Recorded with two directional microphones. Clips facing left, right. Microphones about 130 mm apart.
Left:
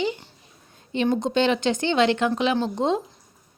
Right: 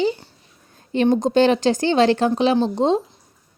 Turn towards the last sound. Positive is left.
turn(degrees=-30)  # may be behind; listen again after turning